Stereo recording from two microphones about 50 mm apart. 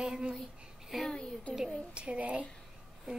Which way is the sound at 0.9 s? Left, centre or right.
Centre.